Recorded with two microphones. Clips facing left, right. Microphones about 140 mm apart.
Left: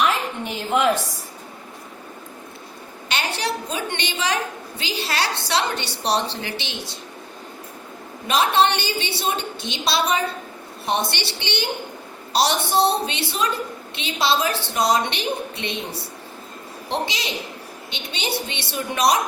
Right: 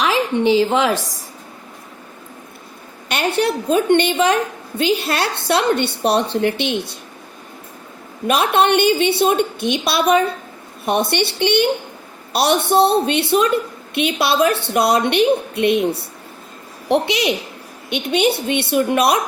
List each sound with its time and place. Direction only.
0.0 s a woman's voice: 90° right
3.1 s a woman's voice: 55° right (ahead or behind)
8.3 s a woman's voice: 55° right (ahead or behind)